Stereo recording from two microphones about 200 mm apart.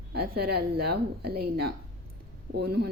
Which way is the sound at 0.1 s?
50° right (ahead or behind).